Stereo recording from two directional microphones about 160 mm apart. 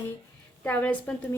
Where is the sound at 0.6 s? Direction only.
10° left (ahead or behind).